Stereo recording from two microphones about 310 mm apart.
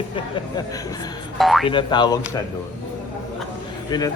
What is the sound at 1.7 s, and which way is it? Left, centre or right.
Speech, centre.